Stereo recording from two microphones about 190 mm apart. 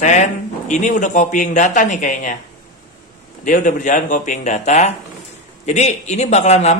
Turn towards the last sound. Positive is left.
turn(degrees=35)  # may be behind; listen again after turning